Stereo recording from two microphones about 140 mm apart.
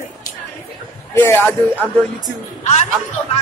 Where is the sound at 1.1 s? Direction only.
15° left (ahead or behind).